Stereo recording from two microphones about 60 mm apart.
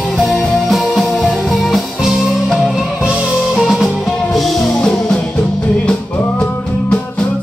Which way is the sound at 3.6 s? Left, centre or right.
Centre.